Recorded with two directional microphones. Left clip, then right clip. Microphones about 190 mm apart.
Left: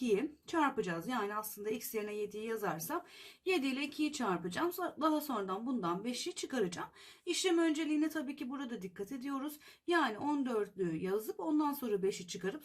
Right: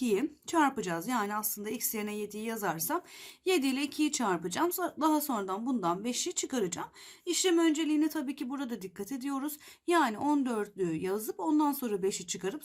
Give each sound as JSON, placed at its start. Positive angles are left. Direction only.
{"t": 0.0, "sound": "speech", "side_deg": -35}